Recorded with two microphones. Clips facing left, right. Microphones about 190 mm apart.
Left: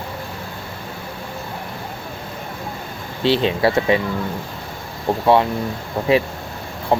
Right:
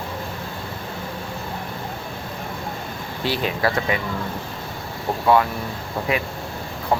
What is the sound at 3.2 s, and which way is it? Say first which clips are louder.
Speech: left 6 dB; 25° left (ahead or behind).